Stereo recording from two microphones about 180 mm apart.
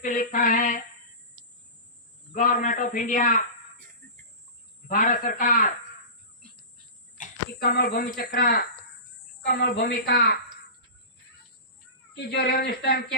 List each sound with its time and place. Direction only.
0.0 s a man's voice: 45° left (ahead or behind)
2.3 s a man's voice: 45° left (ahead or behind)
4.9 s a man's voice: 50° left (ahead or behind)
7.2 s speech: 55° left (ahead or behind)
12.1 s speech: 65° left (ahead or behind)